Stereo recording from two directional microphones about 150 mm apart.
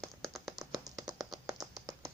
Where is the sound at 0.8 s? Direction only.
25° right (ahead or behind).